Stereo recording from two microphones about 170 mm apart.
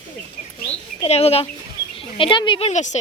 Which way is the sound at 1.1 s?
35° left (ahead or behind).